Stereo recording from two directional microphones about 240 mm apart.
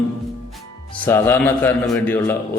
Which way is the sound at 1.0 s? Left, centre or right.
Centre.